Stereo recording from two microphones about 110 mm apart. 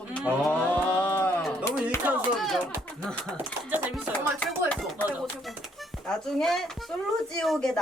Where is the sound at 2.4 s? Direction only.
Centre (ahead or behind).